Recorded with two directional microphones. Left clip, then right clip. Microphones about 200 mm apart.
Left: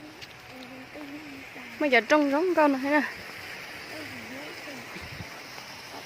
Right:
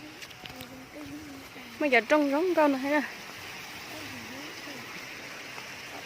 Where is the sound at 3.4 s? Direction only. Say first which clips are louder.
Left 2 dB; 55° right (ahead or behind).